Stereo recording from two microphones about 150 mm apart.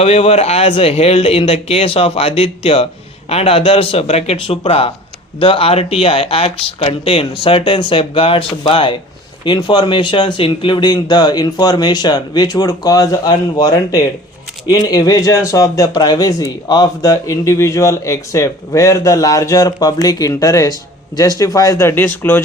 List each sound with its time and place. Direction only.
0.0 s speech: 40° left (ahead or behind); by 22.4 s 15° left (ahead or behind)